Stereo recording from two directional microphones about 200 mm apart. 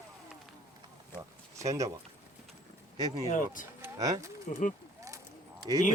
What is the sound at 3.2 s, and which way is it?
Speech, 40° left (ahead or behind).